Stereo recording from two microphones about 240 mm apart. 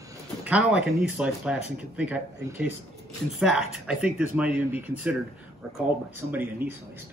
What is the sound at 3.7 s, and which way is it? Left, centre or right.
A man's voice, centre.